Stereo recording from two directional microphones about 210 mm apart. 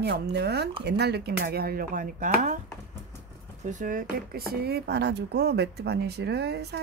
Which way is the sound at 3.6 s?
35° right (ahead or behind).